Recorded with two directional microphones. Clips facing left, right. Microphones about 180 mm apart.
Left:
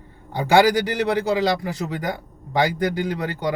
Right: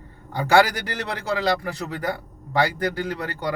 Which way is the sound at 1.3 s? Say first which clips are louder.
Left 2 dB; 15° left (ahead or behind).